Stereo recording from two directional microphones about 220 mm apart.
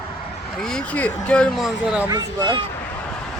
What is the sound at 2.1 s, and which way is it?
Speech, 20° right (ahead or behind).